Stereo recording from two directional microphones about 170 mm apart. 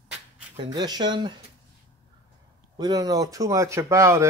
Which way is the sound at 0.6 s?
25° right (ahead or behind).